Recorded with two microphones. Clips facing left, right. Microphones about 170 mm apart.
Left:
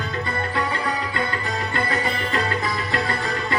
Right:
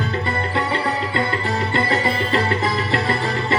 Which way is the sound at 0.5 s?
25° right (ahead or behind).